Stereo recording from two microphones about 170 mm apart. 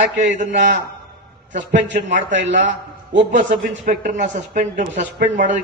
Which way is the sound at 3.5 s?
50° right (ahead or behind).